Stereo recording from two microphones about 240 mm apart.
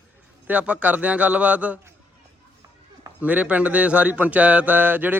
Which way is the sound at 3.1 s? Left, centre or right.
Centre.